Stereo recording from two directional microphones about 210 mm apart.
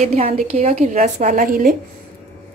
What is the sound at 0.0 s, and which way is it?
A woman's voice, 30° right (ahead or behind).